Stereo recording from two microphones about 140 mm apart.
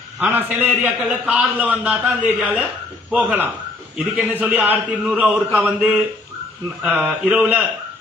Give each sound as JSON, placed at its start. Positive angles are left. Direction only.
{"t": 0.2, "sound": "a man's voice", "side_deg": -10}